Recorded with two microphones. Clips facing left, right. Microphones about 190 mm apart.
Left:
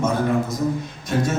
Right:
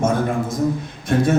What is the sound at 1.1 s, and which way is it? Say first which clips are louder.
Speech: right 4 dB; 55° right (ahead or behind).